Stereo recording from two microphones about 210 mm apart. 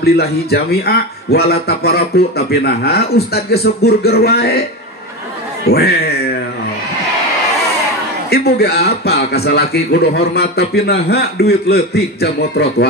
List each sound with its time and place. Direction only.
0.0 s a man's voice: 50° left (ahead or behind)
5.7 s a man's voice: 50° left (ahead or behind)
8.3 s a man's voice: 50° left (ahead or behind)